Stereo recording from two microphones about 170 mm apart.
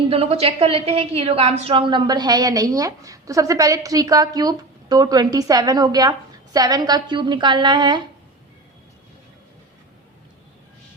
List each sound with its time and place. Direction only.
0.1 s a woman's voice: 35° right (ahead or behind)